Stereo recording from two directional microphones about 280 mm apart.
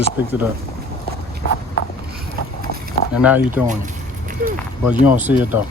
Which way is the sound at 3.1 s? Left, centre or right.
Centre.